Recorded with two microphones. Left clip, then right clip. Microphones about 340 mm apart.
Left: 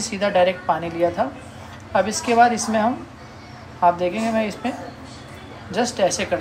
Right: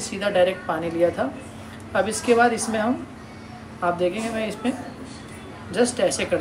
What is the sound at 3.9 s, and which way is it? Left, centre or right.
Speech, centre.